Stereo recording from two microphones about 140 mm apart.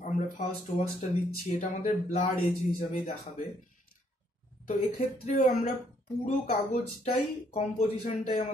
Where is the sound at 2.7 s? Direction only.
70° left (ahead or behind).